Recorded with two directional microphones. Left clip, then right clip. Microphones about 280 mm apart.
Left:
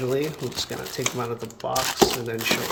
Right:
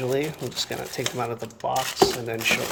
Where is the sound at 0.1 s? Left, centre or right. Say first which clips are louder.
Even; centre.